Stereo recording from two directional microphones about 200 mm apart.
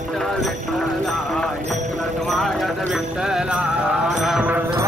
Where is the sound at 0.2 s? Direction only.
Centre (ahead or behind).